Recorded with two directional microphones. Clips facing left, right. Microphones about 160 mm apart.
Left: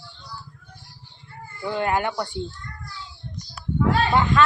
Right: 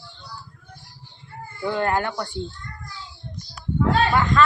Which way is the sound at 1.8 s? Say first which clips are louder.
Left 2 dB; 15° left (ahead or behind).